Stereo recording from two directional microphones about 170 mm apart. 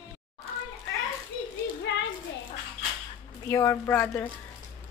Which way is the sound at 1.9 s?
90° left.